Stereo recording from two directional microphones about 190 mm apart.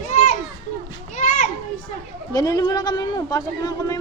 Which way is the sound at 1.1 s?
40° left (ahead or behind).